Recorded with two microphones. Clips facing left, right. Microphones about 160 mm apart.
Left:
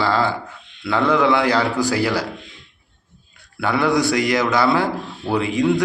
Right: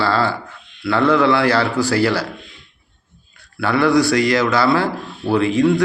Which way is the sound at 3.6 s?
20° left (ahead or behind).